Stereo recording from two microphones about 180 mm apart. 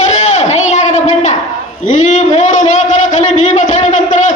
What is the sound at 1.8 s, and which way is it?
A man's voice, 40° left (ahead or behind).